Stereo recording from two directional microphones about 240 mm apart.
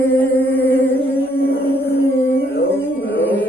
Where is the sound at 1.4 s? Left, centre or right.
Left.